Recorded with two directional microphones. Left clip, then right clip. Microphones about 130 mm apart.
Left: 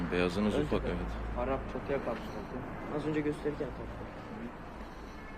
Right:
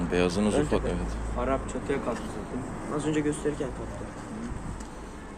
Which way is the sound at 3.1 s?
5° left (ahead or behind).